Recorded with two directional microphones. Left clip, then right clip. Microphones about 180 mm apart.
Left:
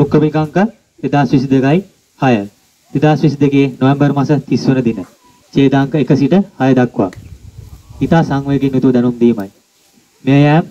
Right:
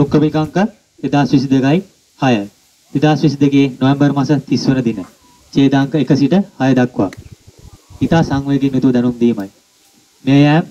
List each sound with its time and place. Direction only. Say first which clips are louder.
0.0 s speech: left 1 dB; 15° left (ahead or behind)
8.1 s speech: left 1 dB; 20° left (ahead or behind)